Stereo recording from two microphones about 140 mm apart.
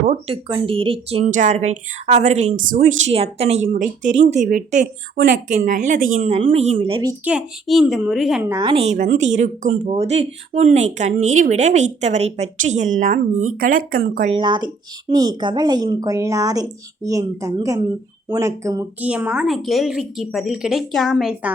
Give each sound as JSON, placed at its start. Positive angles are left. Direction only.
{"t": 0.3, "sound": "a woman's voice", "side_deg": -40}
{"t": 1.2, "sound": "speech", "side_deg": -65}
{"t": 3.1, "sound": "speech", "side_deg": -45}
{"t": 3.7, "sound": "speech", "side_deg": -65}
{"t": 7.3, "sound": "a woman's voice", "side_deg": -5}
{"t": 8.4, "sound": "a woman's voice", "side_deg": -20}
{"t": 8.6, "sound": "speech", "side_deg": -45}
{"t": 14.3, "sound": "a woman's voice", "side_deg": -35}
{"t": 18.9, "sound": "a woman's voice", "side_deg": -10}